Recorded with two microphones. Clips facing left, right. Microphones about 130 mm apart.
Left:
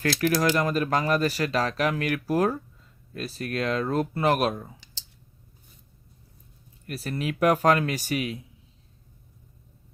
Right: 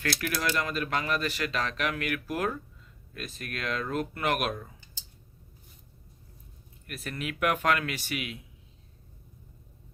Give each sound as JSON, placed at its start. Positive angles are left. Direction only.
{"t": 0.2, "sound": "speech", "side_deg": 40}
{"t": 6.8, "sound": "speech", "side_deg": 35}